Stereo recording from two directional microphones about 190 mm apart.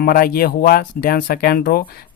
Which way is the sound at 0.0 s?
50° left (ahead or behind).